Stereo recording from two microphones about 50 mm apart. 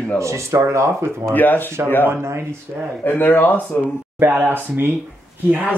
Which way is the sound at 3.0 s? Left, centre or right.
Left.